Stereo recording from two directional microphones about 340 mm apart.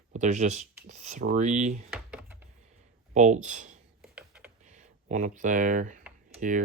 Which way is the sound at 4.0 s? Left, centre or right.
Centre.